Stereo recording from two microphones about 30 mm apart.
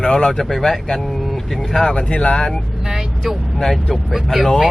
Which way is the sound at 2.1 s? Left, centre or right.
Left.